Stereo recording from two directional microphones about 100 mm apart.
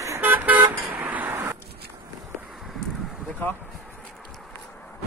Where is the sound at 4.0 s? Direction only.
5° left (ahead or behind).